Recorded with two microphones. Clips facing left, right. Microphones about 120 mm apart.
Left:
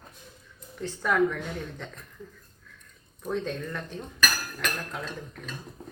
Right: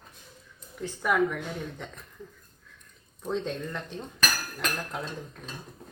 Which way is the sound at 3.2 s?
20° right (ahead or behind).